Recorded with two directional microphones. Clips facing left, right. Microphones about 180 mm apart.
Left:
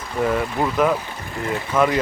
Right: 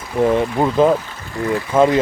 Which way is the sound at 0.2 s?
25° right (ahead or behind).